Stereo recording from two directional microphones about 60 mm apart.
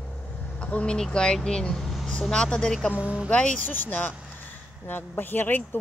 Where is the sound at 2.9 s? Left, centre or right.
Right.